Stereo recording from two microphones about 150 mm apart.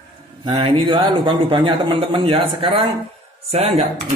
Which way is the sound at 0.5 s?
35° right (ahead or behind).